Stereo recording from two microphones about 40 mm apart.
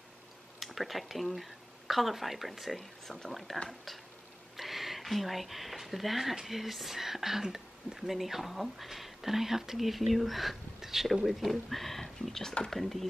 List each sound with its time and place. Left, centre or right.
0.7 s speech: centre